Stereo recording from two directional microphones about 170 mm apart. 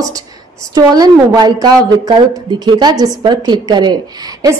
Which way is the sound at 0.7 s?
20° right (ahead or behind).